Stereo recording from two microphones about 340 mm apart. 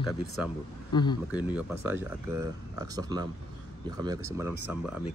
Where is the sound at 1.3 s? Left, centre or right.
Centre.